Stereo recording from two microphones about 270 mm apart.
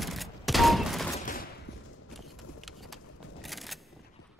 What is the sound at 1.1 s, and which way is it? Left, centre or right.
Fusillade, left.